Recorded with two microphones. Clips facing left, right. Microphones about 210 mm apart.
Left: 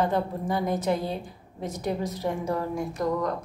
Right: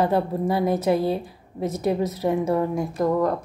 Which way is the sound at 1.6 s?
Centre (ahead or behind).